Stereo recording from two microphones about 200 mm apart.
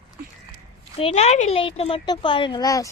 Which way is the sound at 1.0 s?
30° left (ahead or behind).